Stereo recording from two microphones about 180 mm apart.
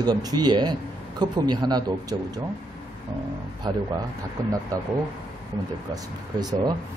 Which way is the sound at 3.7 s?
25° right (ahead or behind).